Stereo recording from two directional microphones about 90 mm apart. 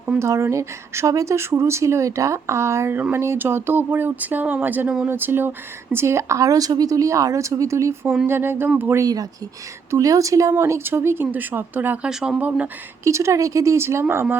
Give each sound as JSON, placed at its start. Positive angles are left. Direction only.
{"t": 0.2, "sound": "speech", "side_deg": -30}
{"t": 9.0, "sound": "speech", "side_deg": -45}
{"t": 12.0, "sound": "speech", "side_deg": -10}
{"t": 13.1, "sound": "speech", "side_deg": -35}